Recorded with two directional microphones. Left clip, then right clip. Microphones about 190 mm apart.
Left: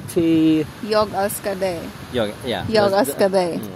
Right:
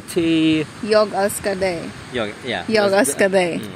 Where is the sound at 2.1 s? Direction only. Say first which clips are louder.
Left 1 dB; 65° left (ahead or behind).